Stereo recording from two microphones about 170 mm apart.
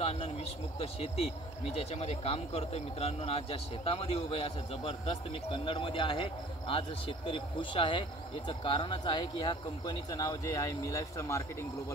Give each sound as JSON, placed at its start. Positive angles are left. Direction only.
{"t": 0.0, "sound": "speech", "side_deg": 35}